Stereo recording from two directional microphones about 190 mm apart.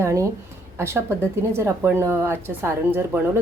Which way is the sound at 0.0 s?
15° right (ahead or behind).